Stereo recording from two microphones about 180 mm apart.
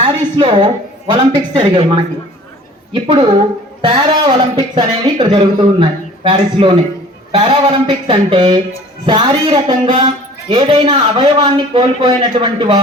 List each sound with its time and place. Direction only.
0.0 s a man's voice: 30° right (ahead or behind)